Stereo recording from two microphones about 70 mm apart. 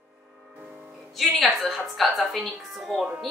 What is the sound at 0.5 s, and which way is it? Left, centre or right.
Music, right.